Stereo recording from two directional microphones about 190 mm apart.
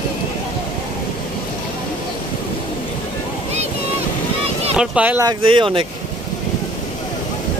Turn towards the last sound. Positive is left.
turn(degrees=-25)  # may be behind; listen again after turning